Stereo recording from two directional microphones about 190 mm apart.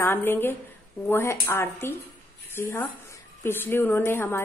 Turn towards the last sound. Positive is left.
turn(degrees=10)  # may be behind; listen again after turning